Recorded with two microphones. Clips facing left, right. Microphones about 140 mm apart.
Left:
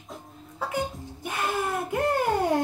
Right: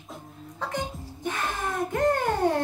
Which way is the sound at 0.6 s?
5° left (ahead or behind).